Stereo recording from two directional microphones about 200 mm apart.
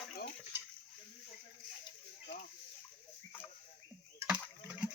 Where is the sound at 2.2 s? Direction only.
40° left (ahead or behind).